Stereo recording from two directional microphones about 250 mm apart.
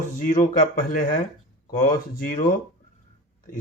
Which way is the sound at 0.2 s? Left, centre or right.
Left.